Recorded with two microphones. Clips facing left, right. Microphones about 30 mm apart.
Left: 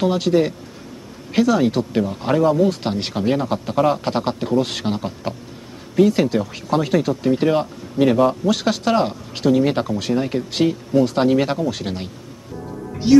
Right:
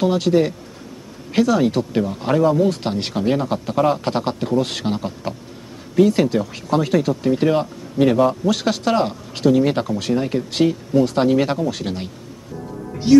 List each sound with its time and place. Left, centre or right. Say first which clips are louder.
0.0 s speech: right 1 dB; centre
12.8 s music: left 1 dB; centre